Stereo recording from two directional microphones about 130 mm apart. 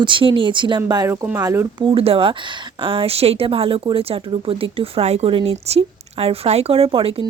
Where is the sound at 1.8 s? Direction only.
45° right (ahead or behind).